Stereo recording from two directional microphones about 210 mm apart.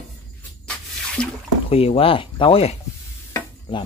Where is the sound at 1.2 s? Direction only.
5° left (ahead or behind).